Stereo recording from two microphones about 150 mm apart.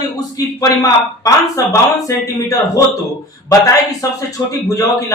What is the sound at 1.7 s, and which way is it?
Speech, 20° left (ahead or behind).